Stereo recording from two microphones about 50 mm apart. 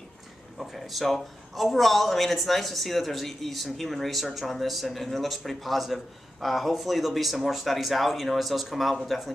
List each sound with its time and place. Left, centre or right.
0.6 s speech: centre